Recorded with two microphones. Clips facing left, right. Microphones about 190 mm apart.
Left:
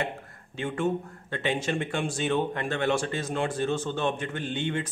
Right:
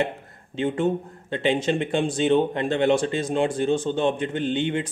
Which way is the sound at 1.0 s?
20° right (ahead or behind).